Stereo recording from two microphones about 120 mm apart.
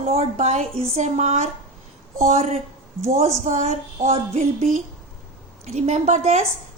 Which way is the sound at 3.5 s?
90° right.